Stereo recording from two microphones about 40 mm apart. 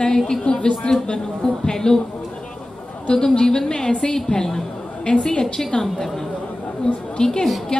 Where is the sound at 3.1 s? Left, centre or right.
Centre.